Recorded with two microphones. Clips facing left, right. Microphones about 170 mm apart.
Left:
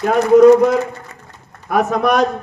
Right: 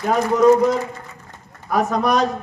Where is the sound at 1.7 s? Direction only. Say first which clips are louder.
Left 3 dB; 60° left (ahead or behind).